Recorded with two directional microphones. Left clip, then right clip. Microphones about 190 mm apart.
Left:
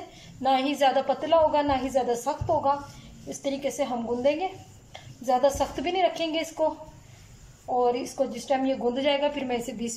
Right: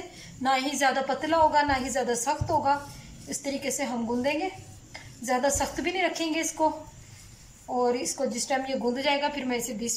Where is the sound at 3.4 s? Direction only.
30° left (ahead or behind).